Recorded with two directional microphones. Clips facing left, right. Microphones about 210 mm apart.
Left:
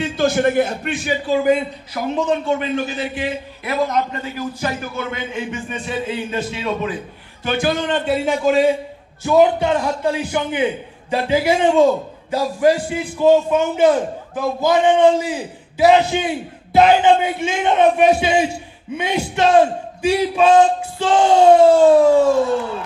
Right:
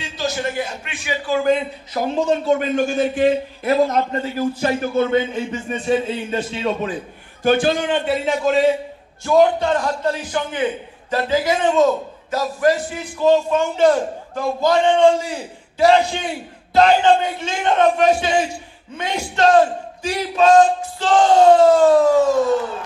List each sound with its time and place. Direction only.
0.0 s a man's voice: 55° left (ahead or behind)
1.2 s a man's voice: 15° left (ahead or behind)
2.1 s a man's voice: 40° right (ahead or behind)
3.7 s a man's voice: 30° right (ahead or behind)
7.9 s a man's voice: centre (ahead or behind)